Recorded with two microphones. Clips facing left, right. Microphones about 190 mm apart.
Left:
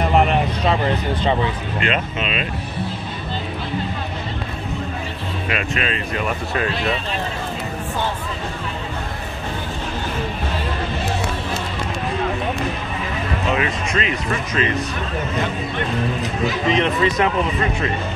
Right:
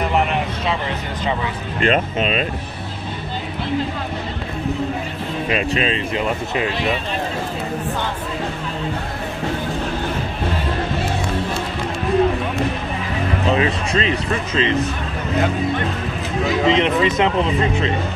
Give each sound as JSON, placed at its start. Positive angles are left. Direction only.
{"t": 1.8, "sound": "speech", "side_deg": -40}
{"t": 5.5, "sound": "speech", "side_deg": -30}
{"t": 13.5, "sound": "speech", "side_deg": -30}
{"t": 16.6, "sound": "speech", "side_deg": -20}